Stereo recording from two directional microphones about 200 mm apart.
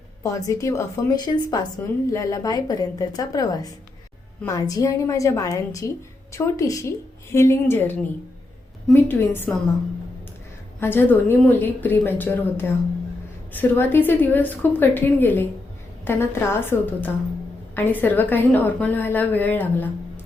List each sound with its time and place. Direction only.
0.2 s a woman's voice: 15° left (ahead or behind)
10.8 s a woman's voice: 10° left (ahead or behind)